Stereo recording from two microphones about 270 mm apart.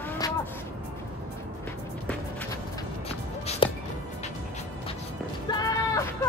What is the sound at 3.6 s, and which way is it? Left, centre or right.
Music, centre.